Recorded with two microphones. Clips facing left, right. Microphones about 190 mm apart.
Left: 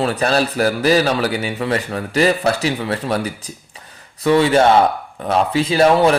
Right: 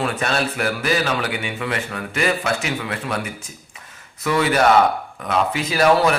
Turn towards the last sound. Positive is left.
turn(degrees=30)  # may be behind; listen again after turning